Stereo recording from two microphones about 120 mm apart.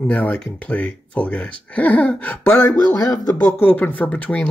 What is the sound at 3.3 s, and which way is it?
Speech, 15° left (ahead or behind).